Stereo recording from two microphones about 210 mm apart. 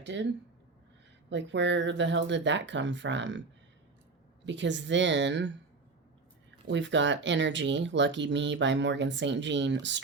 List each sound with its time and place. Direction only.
0.0 s speech: 60° right (ahead or behind)
1.3 s speech: 60° right (ahead or behind)
4.4 s speech: 60° right (ahead or behind)
6.7 s speech: 60° right (ahead or behind)